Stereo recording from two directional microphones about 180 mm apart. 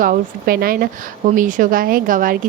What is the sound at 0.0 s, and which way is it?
Speech, 50° right (ahead or behind).